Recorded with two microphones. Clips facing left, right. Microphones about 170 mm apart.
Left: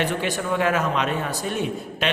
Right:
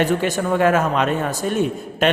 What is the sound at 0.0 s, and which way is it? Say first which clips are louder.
Speech: right 5 dB; 45° right (ahead or behind).